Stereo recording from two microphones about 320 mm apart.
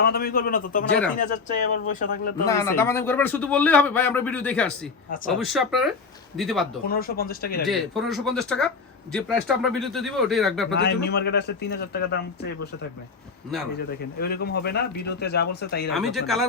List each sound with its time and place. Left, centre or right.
0.0 s speech: left
2.5 s a man's voice: centre
6.8 s speech: left
7.7 s a man's voice: centre
10.7 s speech: left
13.7 s speech: left
16.0 s a man's voice: centre